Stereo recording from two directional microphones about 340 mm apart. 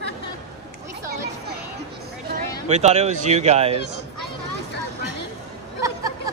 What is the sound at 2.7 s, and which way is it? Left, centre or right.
Speech, centre.